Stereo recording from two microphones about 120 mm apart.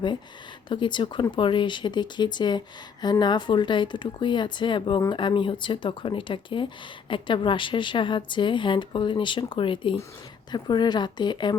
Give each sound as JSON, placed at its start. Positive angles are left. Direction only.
{"t": 0.7, "sound": "a woman's voice", "side_deg": 40}